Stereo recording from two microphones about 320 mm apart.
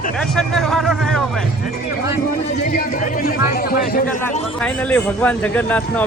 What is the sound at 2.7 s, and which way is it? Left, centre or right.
Speech, left.